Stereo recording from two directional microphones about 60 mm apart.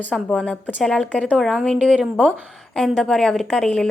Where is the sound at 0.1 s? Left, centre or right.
Centre.